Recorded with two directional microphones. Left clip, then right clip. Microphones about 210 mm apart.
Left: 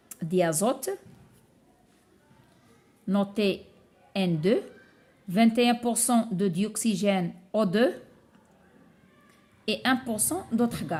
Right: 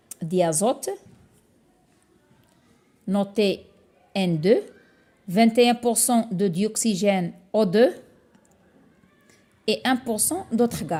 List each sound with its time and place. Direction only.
0.1 s speech: 15° right (ahead or behind)
3.1 s speech: 20° right (ahead or behind)
9.6 s speech: 25° right (ahead or behind)